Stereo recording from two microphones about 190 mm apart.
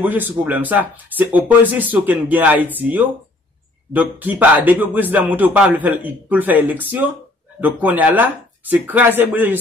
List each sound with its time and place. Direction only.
0.0 s speech: 10° right (ahead or behind)